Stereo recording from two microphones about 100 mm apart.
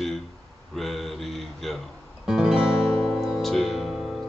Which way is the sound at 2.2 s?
5° right (ahead or behind).